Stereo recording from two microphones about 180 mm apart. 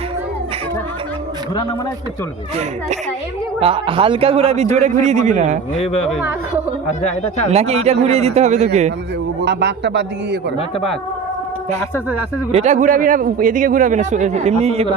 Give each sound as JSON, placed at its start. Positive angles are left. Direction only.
{"t": 3.6, "sound": "a man's voice", "side_deg": -30}
{"t": 5.7, "sound": "speech", "side_deg": 35}
{"t": 7.5, "sound": "a man's voice", "side_deg": -35}
{"t": 9.4, "sound": "speech", "side_deg": -70}
{"t": 12.5, "sound": "speech", "side_deg": -35}